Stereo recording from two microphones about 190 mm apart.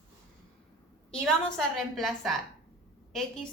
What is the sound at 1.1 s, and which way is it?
A woman's voice, centre (ahead or behind).